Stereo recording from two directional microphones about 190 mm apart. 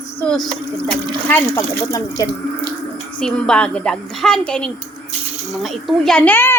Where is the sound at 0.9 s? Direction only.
10° left (ahead or behind).